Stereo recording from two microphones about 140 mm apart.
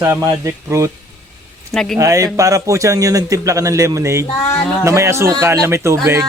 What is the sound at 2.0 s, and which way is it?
Speech, 20° right (ahead or behind).